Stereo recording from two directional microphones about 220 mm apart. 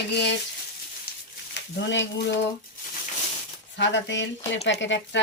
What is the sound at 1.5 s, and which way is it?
Speech, 55° left (ahead or behind).